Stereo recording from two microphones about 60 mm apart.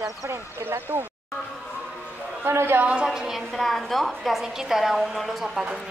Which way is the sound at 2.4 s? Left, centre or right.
Right.